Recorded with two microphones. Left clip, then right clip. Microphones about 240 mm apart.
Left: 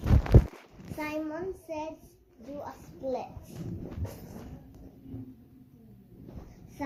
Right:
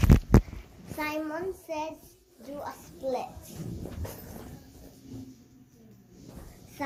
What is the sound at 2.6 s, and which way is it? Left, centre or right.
Speech, right.